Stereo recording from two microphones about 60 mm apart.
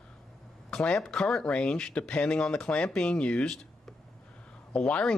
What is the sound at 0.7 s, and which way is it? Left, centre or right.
Speech, centre.